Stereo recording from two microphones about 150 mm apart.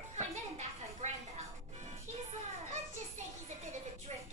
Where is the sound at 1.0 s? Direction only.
50° right (ahead or behind).